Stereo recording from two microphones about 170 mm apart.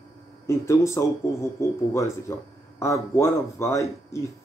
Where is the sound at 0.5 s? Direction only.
15° left (ahead or behind).